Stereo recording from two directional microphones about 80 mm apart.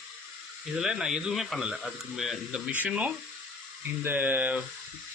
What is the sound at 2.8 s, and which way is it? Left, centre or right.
Speech, centre.